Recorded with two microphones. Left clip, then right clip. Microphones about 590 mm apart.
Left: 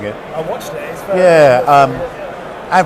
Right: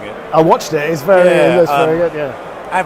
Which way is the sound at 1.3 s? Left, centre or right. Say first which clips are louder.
Left 3 dB; left.